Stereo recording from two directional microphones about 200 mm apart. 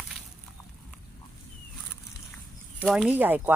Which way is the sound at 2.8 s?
5° right (ahead or behind).